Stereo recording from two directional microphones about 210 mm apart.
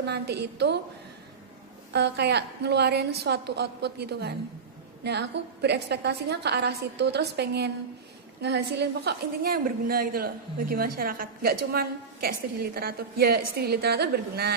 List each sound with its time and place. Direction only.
0.0 s a woman's voice: 50° right (ahead or behind)
1.9 s a woman's voice: 55° right (ahead or behind)